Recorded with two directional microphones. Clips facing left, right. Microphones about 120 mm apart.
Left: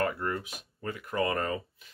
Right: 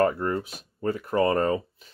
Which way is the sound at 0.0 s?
35° right (ahead or behind).